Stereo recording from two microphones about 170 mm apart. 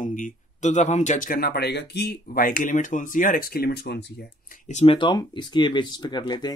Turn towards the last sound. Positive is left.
turn(degrees=25)  # may be behind; listen again after turning